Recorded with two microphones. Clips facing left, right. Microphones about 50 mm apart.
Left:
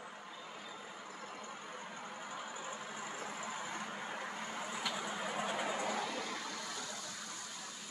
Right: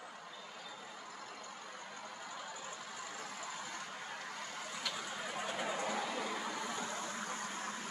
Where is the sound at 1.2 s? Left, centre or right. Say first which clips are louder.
Left 2 dB; left.